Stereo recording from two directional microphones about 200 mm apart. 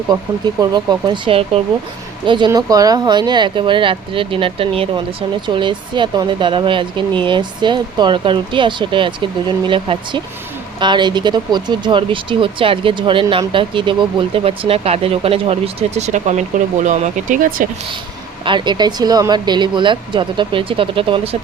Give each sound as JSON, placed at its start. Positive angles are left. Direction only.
{"t": 0.6, "sound": "speech", "side_deg": -20}
{"t": 18.4, "sound": "speech", "side_deg": -25}